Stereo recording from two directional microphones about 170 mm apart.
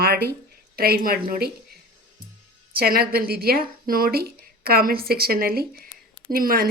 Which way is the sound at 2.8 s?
65° right (ahead or behind).